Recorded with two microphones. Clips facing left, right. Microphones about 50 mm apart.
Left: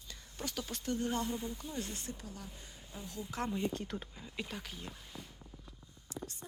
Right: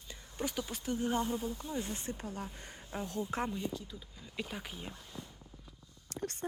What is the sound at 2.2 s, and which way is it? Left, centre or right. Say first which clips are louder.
Speech: right 6 dB; right.